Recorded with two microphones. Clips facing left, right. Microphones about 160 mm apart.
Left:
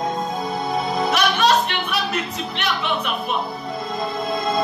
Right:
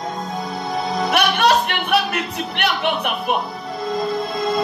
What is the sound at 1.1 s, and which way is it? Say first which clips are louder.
Speech: right 2 dB; 60° right (ahead or behind).